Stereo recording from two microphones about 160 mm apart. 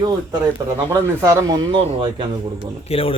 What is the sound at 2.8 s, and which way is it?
Speech, 35° left (ahead or behind).